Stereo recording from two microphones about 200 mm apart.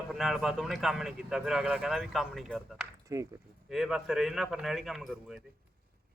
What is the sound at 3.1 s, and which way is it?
Speech, 15° right (ahead or behind).